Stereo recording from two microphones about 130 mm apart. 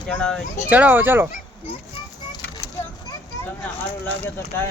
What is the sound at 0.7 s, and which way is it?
Speech, 15° right (ahead or behind).